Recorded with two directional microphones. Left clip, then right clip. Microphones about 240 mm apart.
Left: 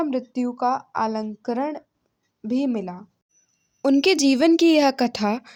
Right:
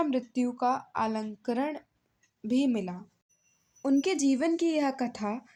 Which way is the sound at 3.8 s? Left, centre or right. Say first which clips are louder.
Left 9 dB; left.